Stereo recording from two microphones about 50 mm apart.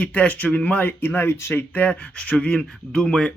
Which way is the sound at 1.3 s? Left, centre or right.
Left.